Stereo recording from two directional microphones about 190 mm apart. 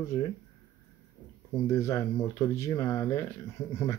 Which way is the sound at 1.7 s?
15° left (ahead or behind).